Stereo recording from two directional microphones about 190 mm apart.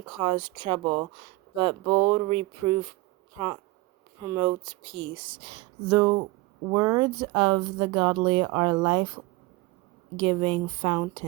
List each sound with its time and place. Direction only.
0.1 s speech: 25° right (ahead or behind)
10.2 s speech: 30° right (ahead or behind)